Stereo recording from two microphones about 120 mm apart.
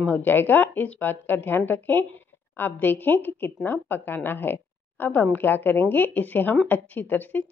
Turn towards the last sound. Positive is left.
turn(degrees=15)  # may be behind; listen again after turning